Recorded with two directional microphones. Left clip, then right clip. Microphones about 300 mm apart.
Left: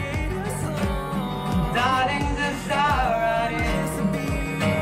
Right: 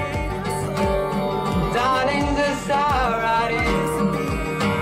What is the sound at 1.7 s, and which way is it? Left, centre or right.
Music, centre.